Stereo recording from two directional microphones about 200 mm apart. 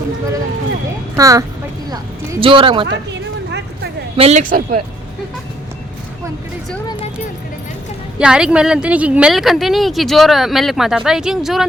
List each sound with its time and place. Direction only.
1.1 s speech: 15° right (ahead or behind)
2.8 s a sound: 60° right (ahead or behind)
4.2 s speech: 35° right (ahead or behind)
8.2 s a woman's voice: 5° right (ahead or behind)